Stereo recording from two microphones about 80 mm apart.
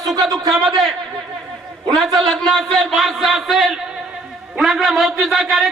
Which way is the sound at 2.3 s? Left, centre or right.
Centre.